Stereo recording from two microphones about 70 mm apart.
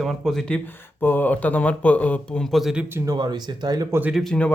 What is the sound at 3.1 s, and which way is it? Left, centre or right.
Speech, right.